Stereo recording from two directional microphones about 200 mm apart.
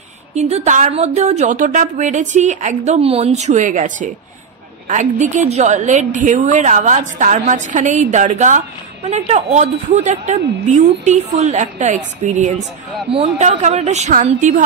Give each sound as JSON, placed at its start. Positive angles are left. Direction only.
{"t": 0.3, "sound": "a woman's voice", "side_deg": -35}
{"t": 5.5, "sound": "a woman's voice", "side_deg": -35}